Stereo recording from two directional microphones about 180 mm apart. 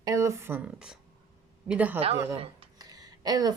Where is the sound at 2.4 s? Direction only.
35° right (ahead or behind).